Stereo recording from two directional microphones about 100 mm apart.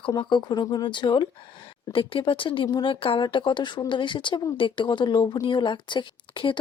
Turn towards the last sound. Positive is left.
turn(degrees=55)  # may be behind; listen again after turning